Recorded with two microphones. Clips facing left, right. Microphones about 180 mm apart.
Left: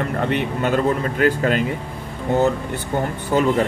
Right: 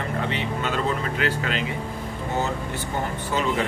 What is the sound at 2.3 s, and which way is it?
Speech, 55° left (ahead or behind).